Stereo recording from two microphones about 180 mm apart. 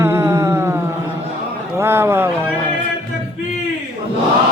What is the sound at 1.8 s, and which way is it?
Speech, 15° right (ahead or behind).